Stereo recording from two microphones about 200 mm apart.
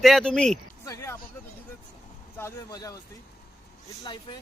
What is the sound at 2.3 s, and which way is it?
Speech, 15° left (ahead or behind).